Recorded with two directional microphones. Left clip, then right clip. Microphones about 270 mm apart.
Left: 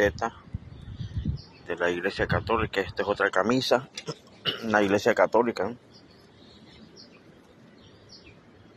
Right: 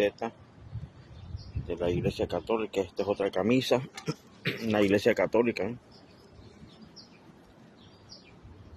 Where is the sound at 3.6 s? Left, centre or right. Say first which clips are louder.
Left 3 dB; right.